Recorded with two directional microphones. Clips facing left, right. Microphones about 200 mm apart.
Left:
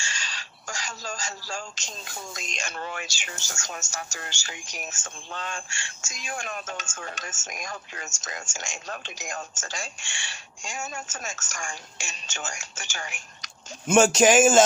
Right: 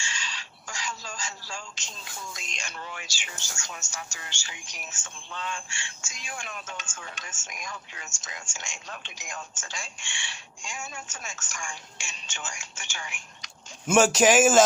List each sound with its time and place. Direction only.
0.0 s speech: 40° left (ahead or behind); by 3.1 s 60° left (ahead or behind)
3.2 s speech: 45° left (ahead or behind)
13.8 s speech: centre (ahead or behind)